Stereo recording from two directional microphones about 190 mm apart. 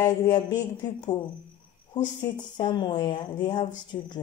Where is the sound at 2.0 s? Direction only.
25° left (ahead or behind).